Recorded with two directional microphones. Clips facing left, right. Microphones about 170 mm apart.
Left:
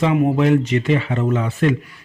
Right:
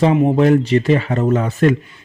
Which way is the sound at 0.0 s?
25° right (ahead or behind).